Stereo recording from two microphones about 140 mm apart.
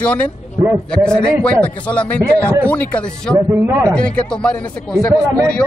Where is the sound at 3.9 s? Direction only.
5° left (ahead or behind).